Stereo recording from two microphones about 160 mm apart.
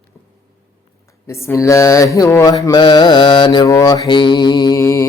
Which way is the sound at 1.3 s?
15° left (ahead or behind).